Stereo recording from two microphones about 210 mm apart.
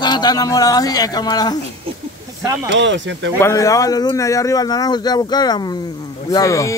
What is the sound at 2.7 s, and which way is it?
Speech, 60° right (ahead or behind).